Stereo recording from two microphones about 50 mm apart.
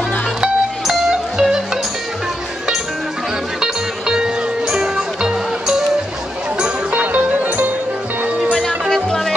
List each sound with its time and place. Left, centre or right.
0.4 s music: centre
3.6 s music: centre
7.0 s music: right
8.6 s music: centre